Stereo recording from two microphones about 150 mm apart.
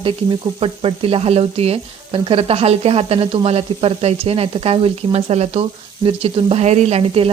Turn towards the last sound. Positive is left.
turn(degrees=-40)  # may be behind; listen again after turning